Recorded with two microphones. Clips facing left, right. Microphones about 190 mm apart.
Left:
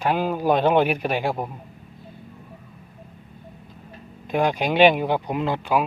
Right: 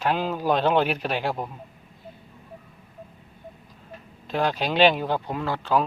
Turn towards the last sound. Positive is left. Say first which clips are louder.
# left 2 dB
turn(degrees=15)  # may be behind; listen again after turning